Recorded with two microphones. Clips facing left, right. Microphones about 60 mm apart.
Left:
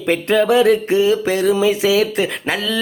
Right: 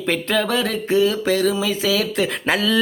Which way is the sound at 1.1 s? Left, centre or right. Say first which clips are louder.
Left 3 dB; centre.